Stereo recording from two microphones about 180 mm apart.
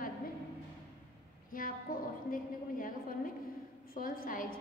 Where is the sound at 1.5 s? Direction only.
50° left (ahead or behind).